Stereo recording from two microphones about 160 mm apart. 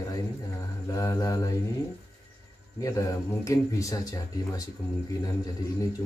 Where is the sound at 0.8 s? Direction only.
20° left (ahead or behind).